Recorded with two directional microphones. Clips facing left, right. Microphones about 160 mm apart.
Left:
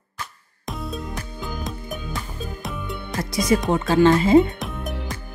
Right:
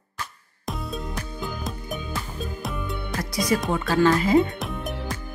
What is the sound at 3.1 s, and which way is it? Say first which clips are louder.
Music: left 2 dB; 25° left (ahead or behind).